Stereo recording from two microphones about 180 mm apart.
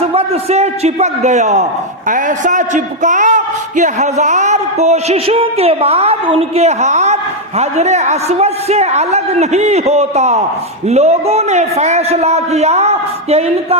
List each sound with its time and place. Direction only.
0.0 s a man's voice: 35° right (ahead or behind)